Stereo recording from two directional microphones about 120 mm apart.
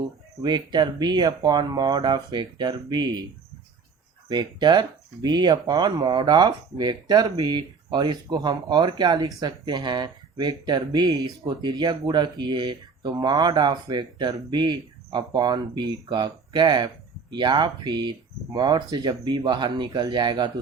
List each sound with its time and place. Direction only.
0.4 s speech: 35° right (ahead or behind)
4.3 s speech: 40° right (ahead or behind)